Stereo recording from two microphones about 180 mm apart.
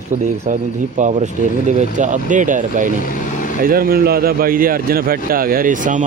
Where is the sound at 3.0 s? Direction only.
45° left (ahead or behind).